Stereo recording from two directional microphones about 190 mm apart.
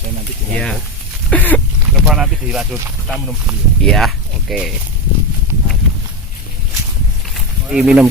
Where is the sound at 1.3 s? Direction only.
10° left (ahead or behind).